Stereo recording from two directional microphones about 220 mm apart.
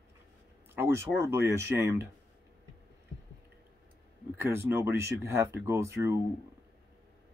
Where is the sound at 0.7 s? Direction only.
10° right (ahead or behind).